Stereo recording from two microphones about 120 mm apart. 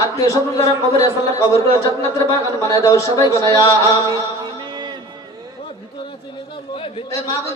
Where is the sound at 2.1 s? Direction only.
25° left (ahead or behind).